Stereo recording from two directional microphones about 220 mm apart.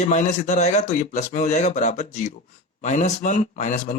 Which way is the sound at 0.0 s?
30° left (ahead or behind).